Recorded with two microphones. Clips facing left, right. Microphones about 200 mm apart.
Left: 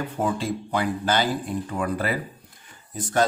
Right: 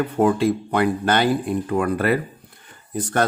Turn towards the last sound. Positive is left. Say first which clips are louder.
# right 2 dB
turn(degrees=-60)  # may be behind; listen again after turning